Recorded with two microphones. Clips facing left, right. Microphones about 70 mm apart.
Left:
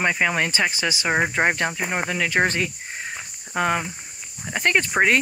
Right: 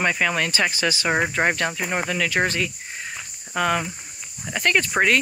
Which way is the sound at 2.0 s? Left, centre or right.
Left.